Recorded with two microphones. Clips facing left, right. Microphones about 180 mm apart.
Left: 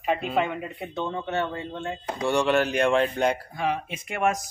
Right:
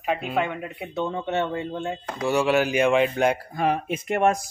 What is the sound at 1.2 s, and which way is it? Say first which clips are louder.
Speech: right 3 dB; 20° right (ahead or behind).